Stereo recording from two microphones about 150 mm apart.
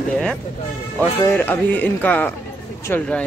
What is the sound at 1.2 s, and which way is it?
Speech, 15° left (ahead or behind).